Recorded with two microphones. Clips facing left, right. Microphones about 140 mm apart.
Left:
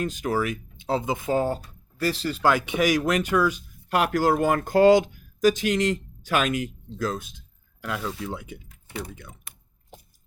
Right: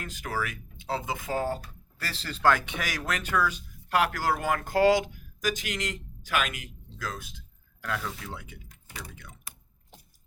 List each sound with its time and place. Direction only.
0.0 s speech: 20° left (ahead or behind)